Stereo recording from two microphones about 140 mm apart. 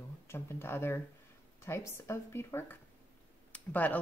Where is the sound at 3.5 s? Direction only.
10° left (ahead or behind).